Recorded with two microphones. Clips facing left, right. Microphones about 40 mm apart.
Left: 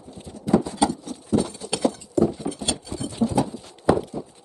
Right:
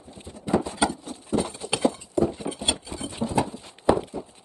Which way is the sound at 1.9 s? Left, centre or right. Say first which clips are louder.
Left 3 dB; right.